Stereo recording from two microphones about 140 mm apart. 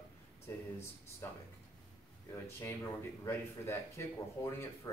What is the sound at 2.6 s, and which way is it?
Speech, 20° left (ahead or behind).